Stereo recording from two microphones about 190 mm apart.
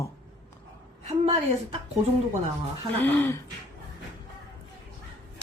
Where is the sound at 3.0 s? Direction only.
10° left (ahead or behind).